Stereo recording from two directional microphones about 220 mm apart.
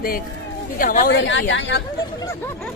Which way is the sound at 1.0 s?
55° left (ahead or behind).